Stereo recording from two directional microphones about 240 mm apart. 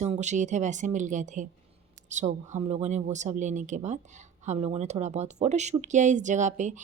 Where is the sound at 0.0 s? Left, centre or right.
Right.